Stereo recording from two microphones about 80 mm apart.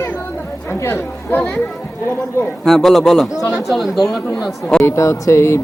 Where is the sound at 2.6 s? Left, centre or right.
Centre.